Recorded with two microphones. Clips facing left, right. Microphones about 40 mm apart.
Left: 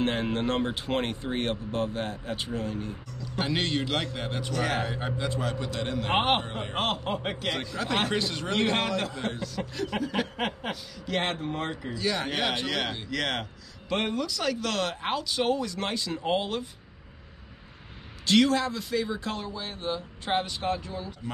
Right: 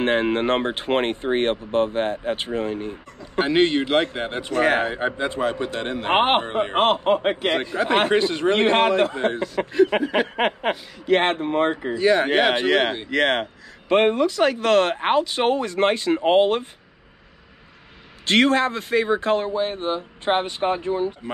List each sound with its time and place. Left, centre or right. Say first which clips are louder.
0.0 s speech: right 7 dB; right
18.2 s speech: right 5 dB; right